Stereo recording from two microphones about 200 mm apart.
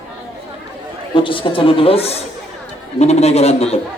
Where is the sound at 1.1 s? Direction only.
25° left (ahead or behind).